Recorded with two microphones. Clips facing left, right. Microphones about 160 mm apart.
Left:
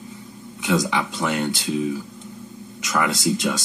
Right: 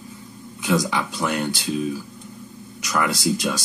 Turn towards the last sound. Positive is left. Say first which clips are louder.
# left 1 dB
turn(degrees=20)  # may be behind; listen again after turning